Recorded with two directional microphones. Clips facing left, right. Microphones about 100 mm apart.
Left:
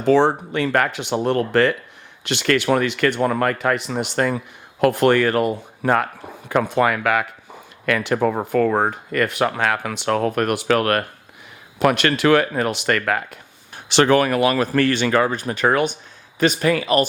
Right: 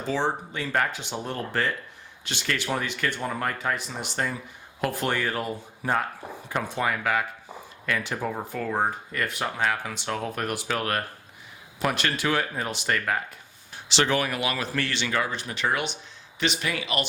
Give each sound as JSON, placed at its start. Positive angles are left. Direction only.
{"t": 0.0, "sound": "speech", "side_deg": 65}
{"t": 13.7, "sound": "speech", "side_deg": 55}